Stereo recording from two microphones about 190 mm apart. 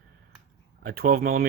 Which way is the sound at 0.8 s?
50° right (ahead or behind).